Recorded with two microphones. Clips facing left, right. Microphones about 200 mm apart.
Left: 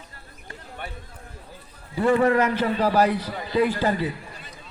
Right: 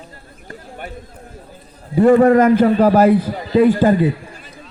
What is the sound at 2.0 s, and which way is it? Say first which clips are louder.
A man's voice: right 9 dB; 45° right (ahead or behind).